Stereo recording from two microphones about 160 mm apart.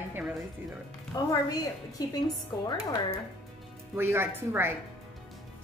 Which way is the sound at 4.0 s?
15° right (ahead or behind).